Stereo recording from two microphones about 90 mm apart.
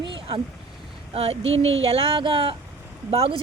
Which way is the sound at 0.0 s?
65° right (ahead or behind).